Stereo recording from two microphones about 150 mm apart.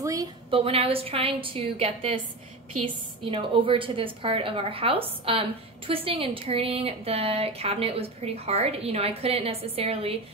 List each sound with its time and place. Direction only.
0.0 s a woman's voice: 25° right (ahead or behind)
0.5 s a woman's voice: 40° right (ahead or behind)